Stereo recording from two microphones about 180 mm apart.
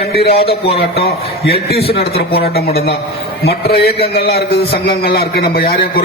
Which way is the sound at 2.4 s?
60° left (ahead or behind).